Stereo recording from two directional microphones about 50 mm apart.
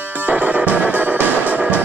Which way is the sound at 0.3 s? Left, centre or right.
Right.